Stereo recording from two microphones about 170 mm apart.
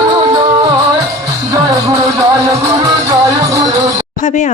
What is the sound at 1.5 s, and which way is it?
Music, 20° right (ahead or behind).